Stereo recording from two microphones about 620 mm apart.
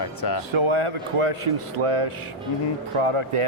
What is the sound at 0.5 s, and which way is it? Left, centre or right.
Speech, right.